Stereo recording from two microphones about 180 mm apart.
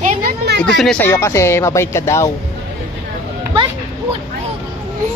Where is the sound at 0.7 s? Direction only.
5° left (ahead or behind).